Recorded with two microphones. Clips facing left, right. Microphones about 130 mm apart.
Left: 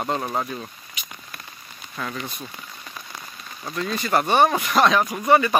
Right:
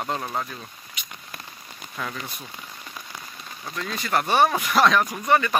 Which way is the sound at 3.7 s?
Centre (ahead or behind).